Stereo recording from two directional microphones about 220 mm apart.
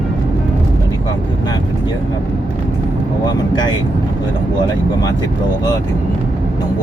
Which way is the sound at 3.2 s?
20° left (ahead or behind).